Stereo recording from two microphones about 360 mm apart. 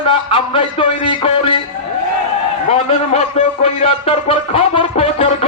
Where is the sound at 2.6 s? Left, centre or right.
Centre.